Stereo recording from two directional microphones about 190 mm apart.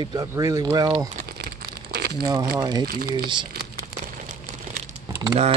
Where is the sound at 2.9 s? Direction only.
50° right (ahead or behind).